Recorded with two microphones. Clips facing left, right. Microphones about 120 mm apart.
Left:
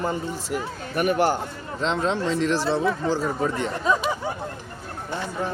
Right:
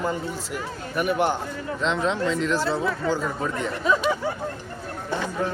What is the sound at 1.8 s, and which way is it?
A man's voice, 35° left (ahead or behind).